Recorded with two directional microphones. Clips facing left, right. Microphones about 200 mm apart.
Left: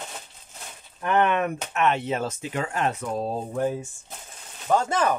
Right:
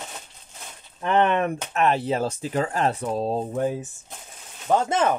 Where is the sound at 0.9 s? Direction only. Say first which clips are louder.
Right 1 dB; 25° right (ahead or behind).